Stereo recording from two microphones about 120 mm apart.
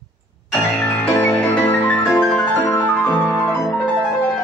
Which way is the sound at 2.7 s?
25° left (ahead or behind).